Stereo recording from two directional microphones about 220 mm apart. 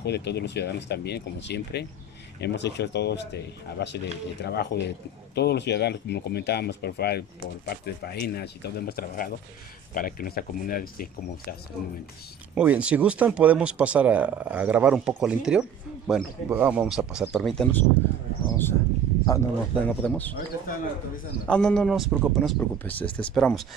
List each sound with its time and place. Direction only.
0.0 s speech: 50° left (ahead or behind)
12.5 s speech: 5° right (ahead or behind)
21.5 s speech: 5° left (ahead or behind)